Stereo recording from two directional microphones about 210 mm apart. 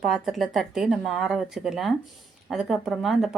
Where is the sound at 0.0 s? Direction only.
Centre (ahead or behind).